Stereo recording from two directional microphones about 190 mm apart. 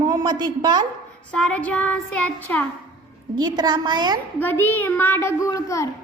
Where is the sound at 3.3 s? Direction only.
20° right (ahead or behind).